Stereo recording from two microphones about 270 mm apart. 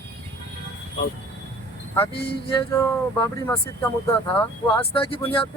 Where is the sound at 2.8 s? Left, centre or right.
Centre.